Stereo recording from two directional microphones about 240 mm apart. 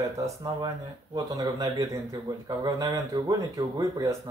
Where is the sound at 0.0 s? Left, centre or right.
Centre.